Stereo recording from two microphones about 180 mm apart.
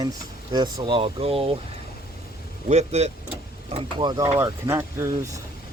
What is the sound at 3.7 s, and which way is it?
Speech, 25° right (ahead or behind).